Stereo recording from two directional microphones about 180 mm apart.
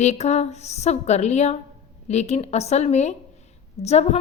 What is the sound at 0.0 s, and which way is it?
A woman's voice, 40° left (ahead or behind).